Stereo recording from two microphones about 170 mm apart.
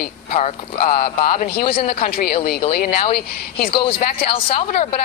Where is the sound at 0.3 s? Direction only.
40° left (ahead or behind).